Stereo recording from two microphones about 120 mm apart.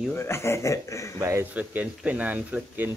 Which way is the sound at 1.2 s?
25° right (ahead or behind).